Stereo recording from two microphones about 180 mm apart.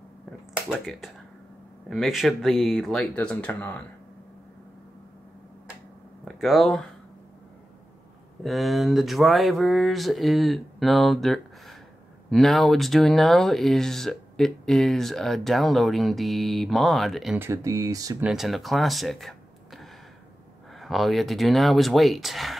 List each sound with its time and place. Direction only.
0.7 s speech: centre (ahead or behind)
6.2 s speech: centre (ahead or behind)
8.5 s speech: centre (ahead or behind)
17.4 s speech: 15° right (ahead or behind)
18.2 s speech: centre (ahead or behind)